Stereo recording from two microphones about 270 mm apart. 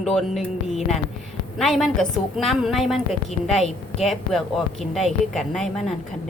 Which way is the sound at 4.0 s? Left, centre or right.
Centre.